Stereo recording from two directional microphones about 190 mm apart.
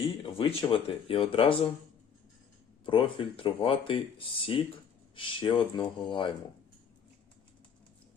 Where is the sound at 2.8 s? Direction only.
25° left (ahead or behind).